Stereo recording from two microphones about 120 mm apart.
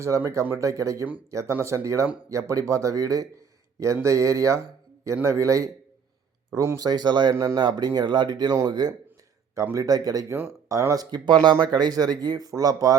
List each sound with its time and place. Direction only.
0.0 s speech: 25° right (ahead or behind)
7.3 s speech: 25° right (ahead or behind)